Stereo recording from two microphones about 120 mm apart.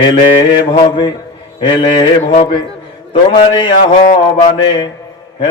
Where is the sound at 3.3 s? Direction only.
40° left (ahead or behind).